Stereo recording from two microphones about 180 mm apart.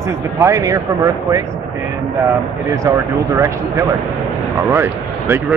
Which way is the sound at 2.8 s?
15° right (ahead or behind).